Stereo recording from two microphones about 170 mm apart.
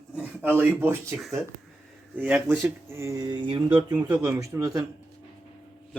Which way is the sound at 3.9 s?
10° right (ahead or behind).